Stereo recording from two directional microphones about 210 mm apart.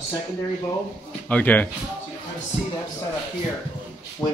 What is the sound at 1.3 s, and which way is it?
Speech, 5° left (ahead or behind).